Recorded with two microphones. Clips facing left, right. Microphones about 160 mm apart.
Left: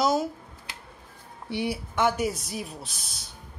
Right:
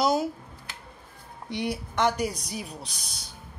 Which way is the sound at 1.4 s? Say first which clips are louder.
Left 1 dB; 5° left (ahead or behind).